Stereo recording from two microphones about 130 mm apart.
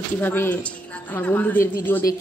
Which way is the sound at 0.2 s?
15° left (ahead or behind).